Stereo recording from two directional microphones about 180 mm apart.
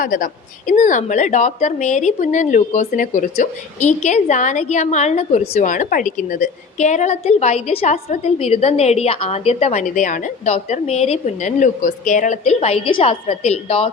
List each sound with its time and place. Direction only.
0.0 s a woman's voice: 50° left (ahead or behind); by 13.9 s 35° left (ahead or behind)